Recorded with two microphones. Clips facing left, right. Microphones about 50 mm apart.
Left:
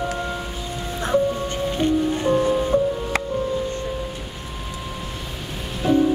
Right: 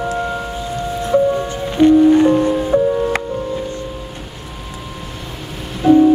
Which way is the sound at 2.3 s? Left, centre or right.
Centre.